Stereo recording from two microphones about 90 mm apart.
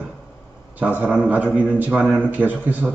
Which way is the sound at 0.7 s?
20° right (ahead or behind).